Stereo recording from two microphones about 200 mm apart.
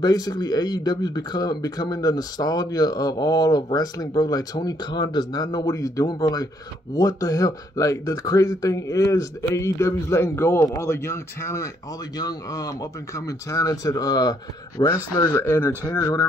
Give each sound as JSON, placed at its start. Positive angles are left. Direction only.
{"t": 0.0, "sound": "speech", "side_deg": 20}
{"t": 15.1, "sound": "speech", "side_deg": 15}